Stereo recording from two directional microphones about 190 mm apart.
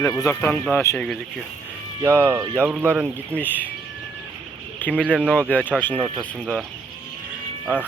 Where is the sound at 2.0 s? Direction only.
10° right (ahead or behind).